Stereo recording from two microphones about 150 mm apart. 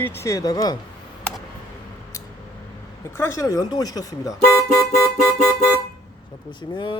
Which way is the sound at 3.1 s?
20° left (ahead or behind).